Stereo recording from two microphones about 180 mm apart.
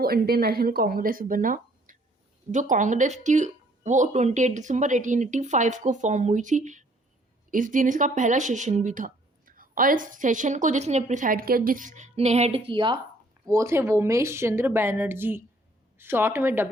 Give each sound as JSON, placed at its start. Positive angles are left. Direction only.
{"t": 0.0, "sound": "speech", "side_deg": -55}
{"t": 13.4, "sound": "speech", "side_deg": -15}